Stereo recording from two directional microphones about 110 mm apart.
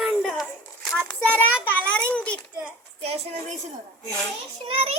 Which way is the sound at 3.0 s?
70° right (ahead or behind).